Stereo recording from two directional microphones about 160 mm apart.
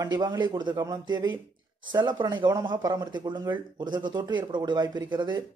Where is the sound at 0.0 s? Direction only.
25° right (ahead or behind).